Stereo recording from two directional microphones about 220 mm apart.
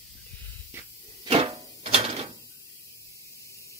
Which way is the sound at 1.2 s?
25° right (ahead or behind).